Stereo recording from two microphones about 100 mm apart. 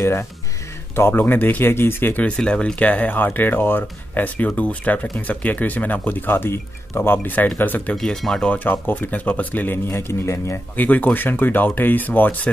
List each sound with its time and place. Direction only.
0.9 s speech: 20° left (ahead or behind)
7.9 s speech: 5° left (ahead or behind); by 10.9 s 30° left (ahead or behind)
10.9 s speech: 15° left (ahead or behind)